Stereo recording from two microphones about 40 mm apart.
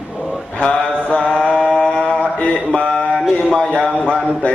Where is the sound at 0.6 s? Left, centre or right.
Left.